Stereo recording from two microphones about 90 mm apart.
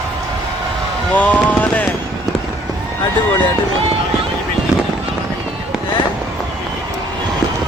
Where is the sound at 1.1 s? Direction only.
15° left (ahead or behind).